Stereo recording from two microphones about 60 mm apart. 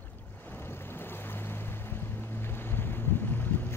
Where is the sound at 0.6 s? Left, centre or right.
Left.